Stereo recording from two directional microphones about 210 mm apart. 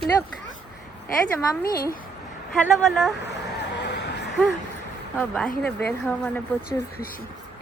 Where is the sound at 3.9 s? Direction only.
55° left (ahead or behind).